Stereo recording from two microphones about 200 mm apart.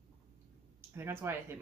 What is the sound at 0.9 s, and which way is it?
Speech, 10° right (ahead or behind).